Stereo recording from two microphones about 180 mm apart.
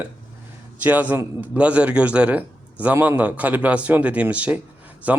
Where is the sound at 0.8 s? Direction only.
10° right (ahead or behind).